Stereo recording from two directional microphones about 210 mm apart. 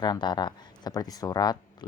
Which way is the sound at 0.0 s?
20° left (ahead or behind).